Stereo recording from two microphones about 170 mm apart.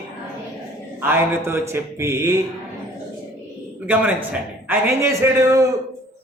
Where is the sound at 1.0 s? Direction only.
10° right (ahead or behind).